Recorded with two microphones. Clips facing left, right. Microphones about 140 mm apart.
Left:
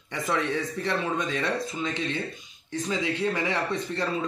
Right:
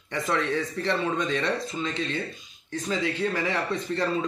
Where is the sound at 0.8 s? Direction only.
5° left (ahead or behind).